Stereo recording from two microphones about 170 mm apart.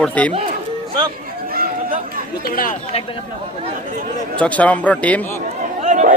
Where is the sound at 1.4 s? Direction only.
60° right (ahead or behind).